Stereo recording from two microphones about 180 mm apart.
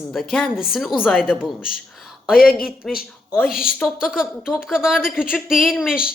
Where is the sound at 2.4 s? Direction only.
55° left (ahead or behind).